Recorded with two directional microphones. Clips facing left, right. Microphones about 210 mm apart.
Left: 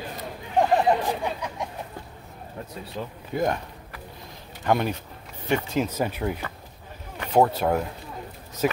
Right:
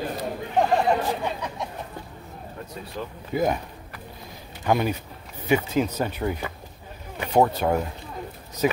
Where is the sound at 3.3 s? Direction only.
5° right (ahead or behind).